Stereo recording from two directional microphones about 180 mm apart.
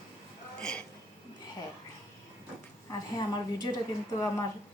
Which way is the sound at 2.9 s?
25° left (ahead or behind).